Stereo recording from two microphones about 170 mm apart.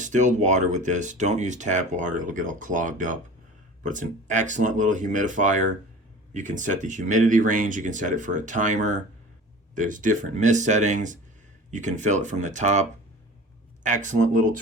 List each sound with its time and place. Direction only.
0.0 s speech: 45° right (ahead or behind)